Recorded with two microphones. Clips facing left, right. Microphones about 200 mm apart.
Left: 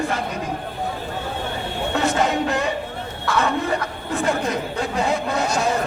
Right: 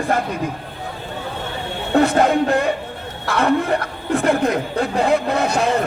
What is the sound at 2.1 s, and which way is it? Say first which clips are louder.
Speech: right 5 dB; 55° right (ahead or behind).